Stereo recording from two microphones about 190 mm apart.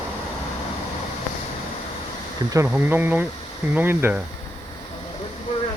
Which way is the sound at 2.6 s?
10° right (ahead or behind).